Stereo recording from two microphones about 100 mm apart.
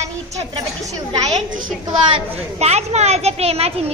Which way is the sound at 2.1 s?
90° right.